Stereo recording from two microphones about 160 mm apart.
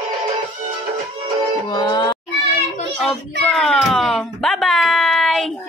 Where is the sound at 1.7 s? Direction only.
25° left (ahead or behind).